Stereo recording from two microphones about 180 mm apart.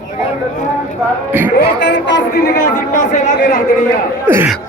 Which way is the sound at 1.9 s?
85° left.